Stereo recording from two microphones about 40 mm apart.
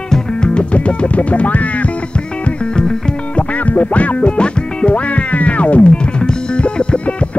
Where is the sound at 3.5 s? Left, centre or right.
Left.